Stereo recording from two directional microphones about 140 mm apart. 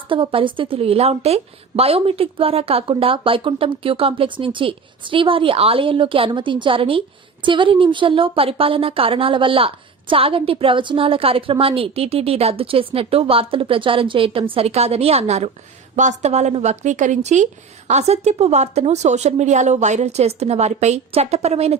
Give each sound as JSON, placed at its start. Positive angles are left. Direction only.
{"t": 0.1, "sound": "a woman's voice", "side_deg": -40}